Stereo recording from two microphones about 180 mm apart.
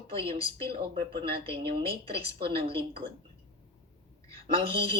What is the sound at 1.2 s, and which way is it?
Speech, 30° right (ahead or behind).